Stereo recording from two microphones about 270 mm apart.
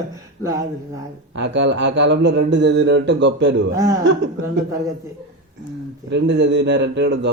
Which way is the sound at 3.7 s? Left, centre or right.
Centre.